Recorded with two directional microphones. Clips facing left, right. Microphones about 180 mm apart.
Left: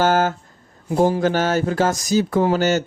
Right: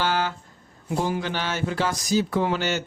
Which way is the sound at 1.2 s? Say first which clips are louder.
Left 9 dB; 45° left (ahead or behind).